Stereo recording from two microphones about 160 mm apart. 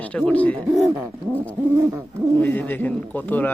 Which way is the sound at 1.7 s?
15° right (ahead or behind).